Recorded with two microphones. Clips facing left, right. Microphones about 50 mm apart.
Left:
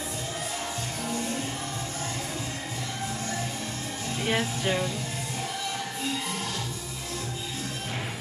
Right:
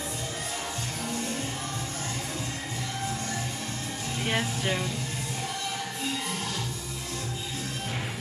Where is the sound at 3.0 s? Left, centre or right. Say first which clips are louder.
Left 1 dB; centre.